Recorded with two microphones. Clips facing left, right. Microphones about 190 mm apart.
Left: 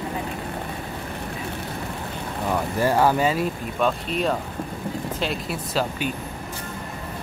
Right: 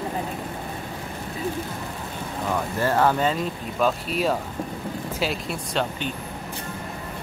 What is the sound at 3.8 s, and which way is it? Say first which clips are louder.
Speech: even; 5° right (ahead or behind).